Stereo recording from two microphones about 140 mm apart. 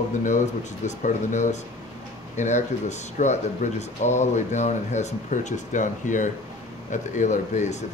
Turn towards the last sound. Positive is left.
turn(degrees=55)  # may be behind; listen again after turning